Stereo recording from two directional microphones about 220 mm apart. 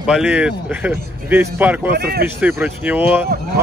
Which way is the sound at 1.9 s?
45° right (ahead or behind).